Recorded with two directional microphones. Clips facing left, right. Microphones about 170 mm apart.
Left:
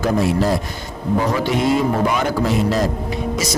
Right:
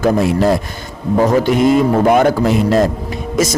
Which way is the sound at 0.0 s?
60° right (ahead or behind).